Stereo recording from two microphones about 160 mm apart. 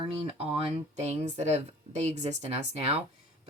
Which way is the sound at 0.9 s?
45° right (ahead or behind).